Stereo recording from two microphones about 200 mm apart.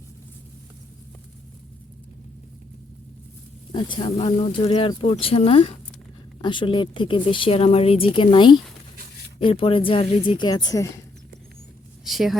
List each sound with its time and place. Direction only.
3.7 s a woman's voice: 25° left (ahead or behind)
12.0 s speech: centre (ahead or behind)